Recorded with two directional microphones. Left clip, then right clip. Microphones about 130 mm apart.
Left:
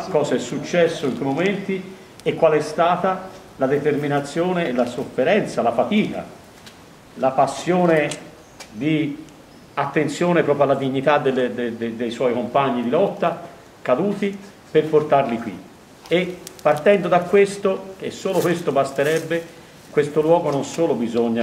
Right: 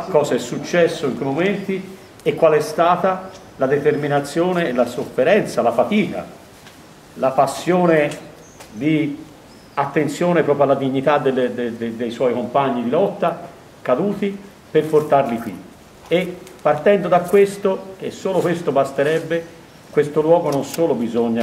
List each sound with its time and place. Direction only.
0.1 s a man's voice: 25° right (ahead or behind); by 21.4 s 5° right (ahead or behind)